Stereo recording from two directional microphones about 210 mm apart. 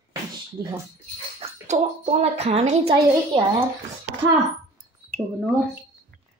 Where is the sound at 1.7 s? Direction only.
30° right (ahead or behind).